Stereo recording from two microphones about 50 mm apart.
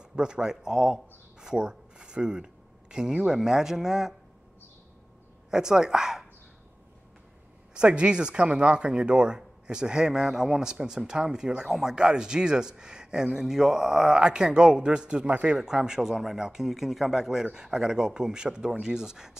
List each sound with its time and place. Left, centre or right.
0.0 s speech: centre
5.5 s speech: centre
7.7 s speech: right